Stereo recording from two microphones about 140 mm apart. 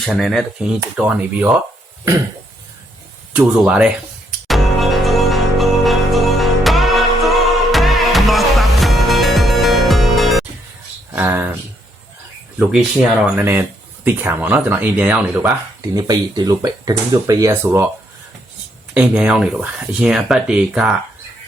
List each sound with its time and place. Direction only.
0.0 s speech: centre (ahead or behind)
0.9 s speech: 10° right (ahead or behind)
3.3 s speech: 5° right (ahead or behind)
4.4 s music: centre (ahead or behind)
11.1 s speech: 15° right (ahead or behind)
13.2 s speech: 15° right (ahead or behind)
15.8 s speech: 25° right (ahead or behind)
18.9 s speech: 10° right (ahead or behind)